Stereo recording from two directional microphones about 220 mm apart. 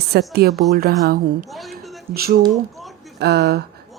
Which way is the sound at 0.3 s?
45° right (ahead or behind).